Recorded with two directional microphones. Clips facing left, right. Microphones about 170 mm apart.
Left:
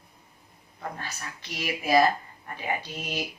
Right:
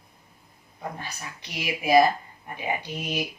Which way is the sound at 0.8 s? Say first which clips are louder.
Right 1 dB; 15° right (ahead or behind).